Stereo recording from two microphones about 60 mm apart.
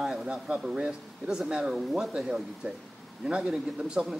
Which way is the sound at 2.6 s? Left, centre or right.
Right.